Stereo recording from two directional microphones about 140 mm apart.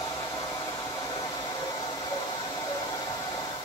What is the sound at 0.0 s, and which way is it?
Hair dryer, 25° left (ahead or behind).